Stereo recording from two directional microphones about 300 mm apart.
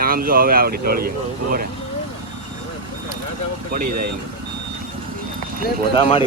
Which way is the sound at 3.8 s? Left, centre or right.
Right.